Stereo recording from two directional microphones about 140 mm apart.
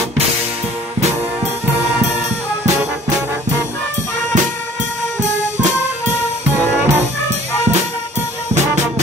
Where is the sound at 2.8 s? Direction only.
15° right (ahead or behind).